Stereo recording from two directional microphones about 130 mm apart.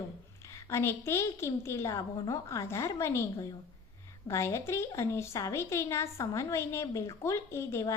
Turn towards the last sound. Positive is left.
turn(degrees=20)  # may be behind; listen again after turning